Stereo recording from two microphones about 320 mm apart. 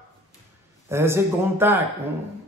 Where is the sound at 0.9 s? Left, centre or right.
Centre.